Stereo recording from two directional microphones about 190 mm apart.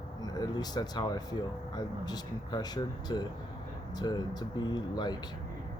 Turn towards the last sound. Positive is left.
turn(degrees=25)  # may be behind; listen again after turning